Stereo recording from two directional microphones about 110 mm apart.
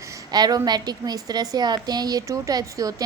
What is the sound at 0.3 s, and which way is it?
A woman's voice, 40° right (ahead or behind).